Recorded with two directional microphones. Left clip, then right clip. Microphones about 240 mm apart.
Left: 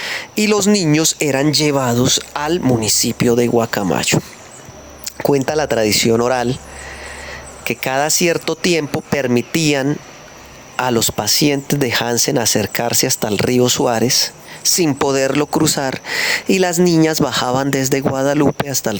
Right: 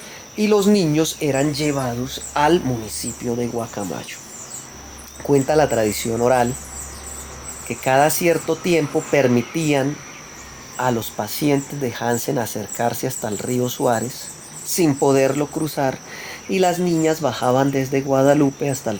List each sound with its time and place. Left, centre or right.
0.0 s speech: left
5.2 s speech: left
7.7 s speech: left